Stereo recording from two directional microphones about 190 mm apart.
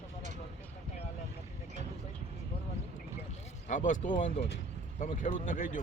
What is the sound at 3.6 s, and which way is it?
Speech, 45° left (ahead or behind).